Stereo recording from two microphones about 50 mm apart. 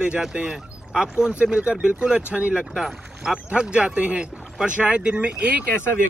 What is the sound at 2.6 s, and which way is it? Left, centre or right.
Speech, centre.